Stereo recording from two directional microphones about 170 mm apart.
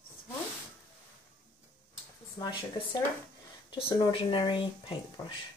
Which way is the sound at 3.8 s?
25° left (ahead or behind).